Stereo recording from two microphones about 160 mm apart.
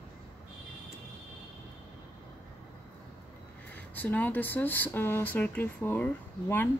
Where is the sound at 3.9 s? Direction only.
10° left (ahead or behind).